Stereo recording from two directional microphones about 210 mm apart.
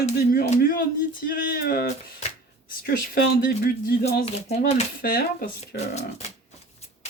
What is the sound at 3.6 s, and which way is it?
Speech, 45° left (ahead or behind).